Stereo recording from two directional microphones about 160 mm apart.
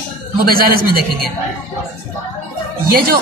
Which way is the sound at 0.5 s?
65° right (ahead or behind).